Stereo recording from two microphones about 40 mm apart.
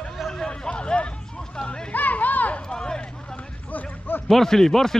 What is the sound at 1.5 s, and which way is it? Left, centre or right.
Hubbub, centre.